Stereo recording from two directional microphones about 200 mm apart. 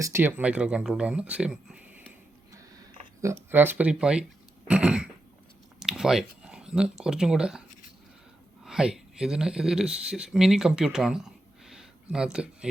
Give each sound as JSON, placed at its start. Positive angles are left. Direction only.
{"t": 0.0, "sound": "speech", "side_deg": -10}
{"t": 3.2, "sound": "speech", "side_deg": -10}
{"t": 4.7, "sound": "a sound", "side_deg": -5}
{"t": 5.8, "sound": "speech", "side_deg": -5}
{"t": 8.6, "sound": "speech", "side_deg": -5}